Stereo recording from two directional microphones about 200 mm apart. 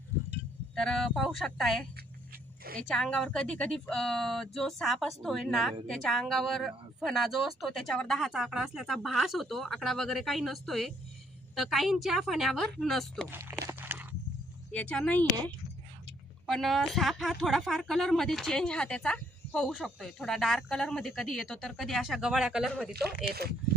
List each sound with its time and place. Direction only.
0.8 s speech: 5° left (ahead or behind)
2.9 s speech: 5° left (ahead or behind)
13.3 s a sound: 10° right (ahead or behind)
14.7 s speech: 5° left (ahead or behind)
22.9 s speech: 50° right (ahead or behind)